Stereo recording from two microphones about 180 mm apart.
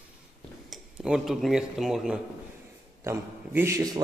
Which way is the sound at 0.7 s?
5° right (ahead or behind).